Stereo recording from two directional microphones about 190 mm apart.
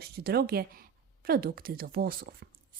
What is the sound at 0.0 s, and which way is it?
Speech, 55° right (ahead or behind).